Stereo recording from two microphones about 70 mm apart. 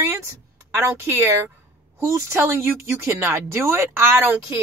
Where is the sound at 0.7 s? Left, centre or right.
Right.